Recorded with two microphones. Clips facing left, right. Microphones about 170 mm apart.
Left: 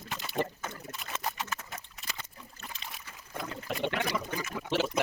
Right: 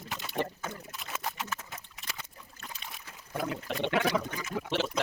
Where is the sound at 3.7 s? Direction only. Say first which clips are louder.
Right 2 dB; 5° left (ahead or behind).